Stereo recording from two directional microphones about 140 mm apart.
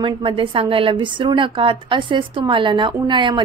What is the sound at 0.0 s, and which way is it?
A woman's voice, 40° right (ahead or behind).